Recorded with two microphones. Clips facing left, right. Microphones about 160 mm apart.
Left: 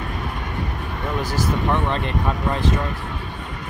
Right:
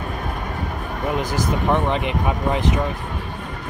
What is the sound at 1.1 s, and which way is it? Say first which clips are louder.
Speech: even; 20° right (ahead or behind).